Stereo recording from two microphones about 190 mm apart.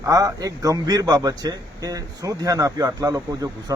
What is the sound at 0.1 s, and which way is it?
A man's voice, 20° right (ahead or behind).